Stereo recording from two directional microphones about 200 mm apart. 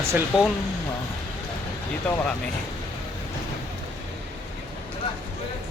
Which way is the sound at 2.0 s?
10° left (ahead or behind).